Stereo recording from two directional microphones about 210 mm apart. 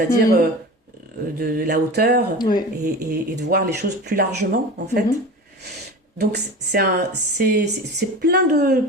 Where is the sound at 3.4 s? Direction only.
45° right (ahead or behind).